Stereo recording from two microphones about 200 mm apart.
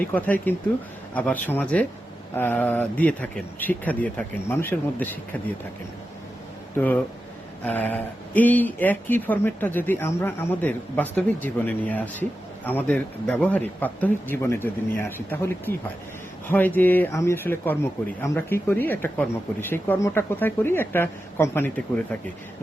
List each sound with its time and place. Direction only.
0.1 s speech: 10° left (ahead or behind)
6.7 s speech: 10° left (ahead or behind)